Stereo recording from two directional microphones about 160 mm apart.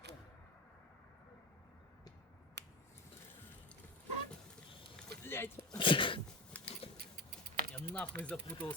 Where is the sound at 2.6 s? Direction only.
90° right.